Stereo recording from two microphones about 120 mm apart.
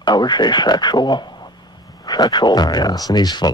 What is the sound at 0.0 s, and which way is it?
Speech, 35° left (ahead or behind).